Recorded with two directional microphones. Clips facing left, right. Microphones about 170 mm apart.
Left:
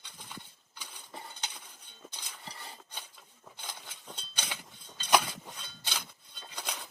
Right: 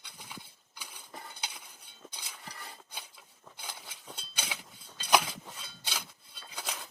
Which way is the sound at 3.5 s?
10° right (ahead or behind).